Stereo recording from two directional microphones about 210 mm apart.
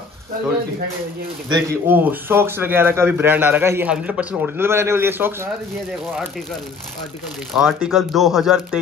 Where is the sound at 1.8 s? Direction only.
10° right (ahead or behind).